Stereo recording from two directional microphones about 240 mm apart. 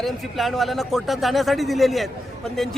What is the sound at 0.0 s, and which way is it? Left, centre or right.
A man's voice, centre.